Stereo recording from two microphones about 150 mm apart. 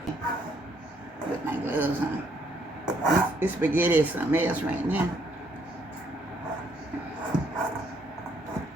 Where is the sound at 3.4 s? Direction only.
10° right (ahead or behind).